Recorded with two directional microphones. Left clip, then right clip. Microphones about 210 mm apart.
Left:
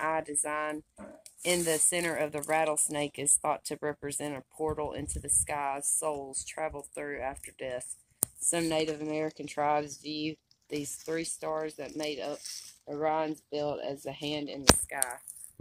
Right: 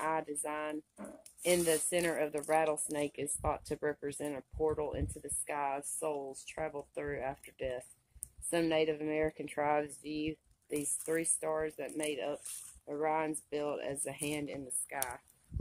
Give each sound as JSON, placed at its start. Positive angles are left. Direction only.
{"t": 0.0, "sound": "speech", "side_deg": 50}